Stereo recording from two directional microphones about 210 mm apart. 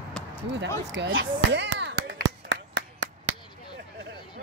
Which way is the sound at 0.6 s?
60° right (ahead or behind).